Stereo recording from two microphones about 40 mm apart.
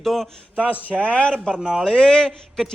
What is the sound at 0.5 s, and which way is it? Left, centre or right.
Speech, right.